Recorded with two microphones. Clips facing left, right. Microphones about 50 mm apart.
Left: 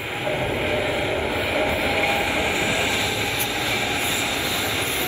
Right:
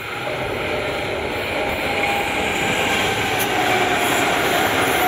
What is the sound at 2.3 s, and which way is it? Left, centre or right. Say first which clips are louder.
Train: right 2 dB; right.